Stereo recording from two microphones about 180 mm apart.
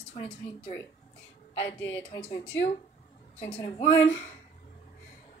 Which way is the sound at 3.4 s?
30° left (ahead or behind).